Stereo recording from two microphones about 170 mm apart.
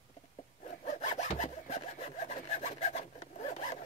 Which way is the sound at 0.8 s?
45° left (ahead or behind).